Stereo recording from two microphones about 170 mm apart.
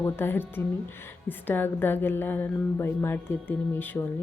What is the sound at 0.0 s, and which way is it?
A woman's voice, 15° left (ahead or behind).